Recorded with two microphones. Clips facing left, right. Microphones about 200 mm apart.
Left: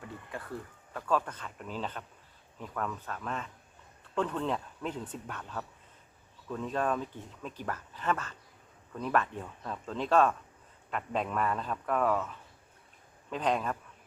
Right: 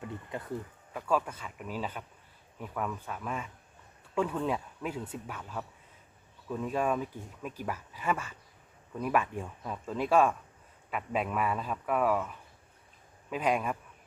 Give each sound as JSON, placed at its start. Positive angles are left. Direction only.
{"t": 0.3, "sound": "speech", "side_deg": -20}
{"t": 0.9, "sound": "speech", "side_deg": -10}